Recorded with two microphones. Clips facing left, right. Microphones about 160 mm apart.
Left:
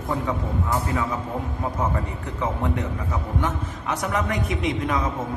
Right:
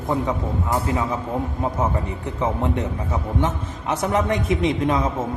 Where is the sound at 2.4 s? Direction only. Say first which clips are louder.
Right 3 dB; 20° right (ahead or behind).